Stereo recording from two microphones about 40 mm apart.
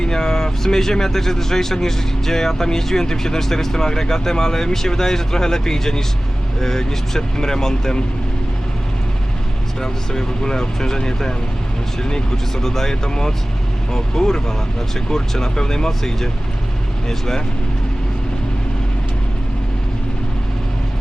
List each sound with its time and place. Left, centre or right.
0.0 s speech: centre
9.8 s speech: centre